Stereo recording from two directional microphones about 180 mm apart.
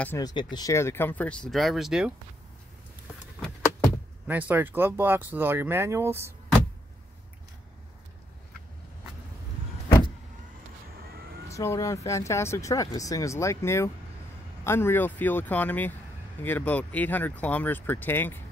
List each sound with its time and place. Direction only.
0.2 s speech: 25° left (ahead or behind); by 2.1 s centre (ahead or behind)
4.3 s speech: 10° right (ahead or behind)
11.0 s vehicle: 60° right (ahead or behind)
11.4 s speech: 15° left (ahead or behind)